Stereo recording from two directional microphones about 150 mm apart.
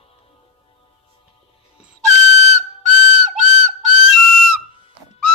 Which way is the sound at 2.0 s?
50° right (ahead or behind).